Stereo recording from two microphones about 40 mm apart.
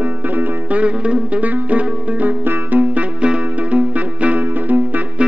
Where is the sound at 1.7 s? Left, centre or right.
Right.